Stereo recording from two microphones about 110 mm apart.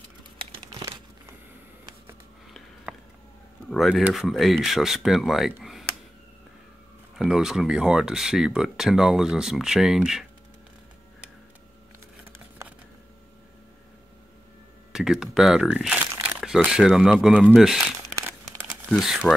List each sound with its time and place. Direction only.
0.7 s crumpling: 35° right (ahead or behind)
2.9 s a sound: 5° right (ahead or behind)
3.7 s speech: centre (ahead or behind)
7.2 s speech: 5° right (ahead or behind)
14.9 s speech: 5° right (ahead or behind)